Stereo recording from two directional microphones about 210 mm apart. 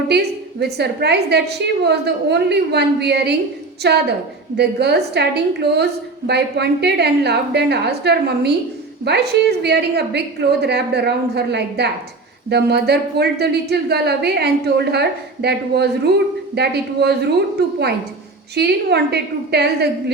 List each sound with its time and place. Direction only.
0.1 s a woman's voice: 50° right (ahead or behind)
18.5 s a woman's voice: 50° right (ahead or behind)